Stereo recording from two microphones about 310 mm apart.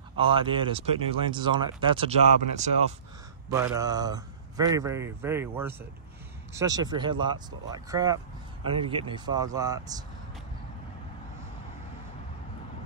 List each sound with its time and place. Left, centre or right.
0.2 s speech: centre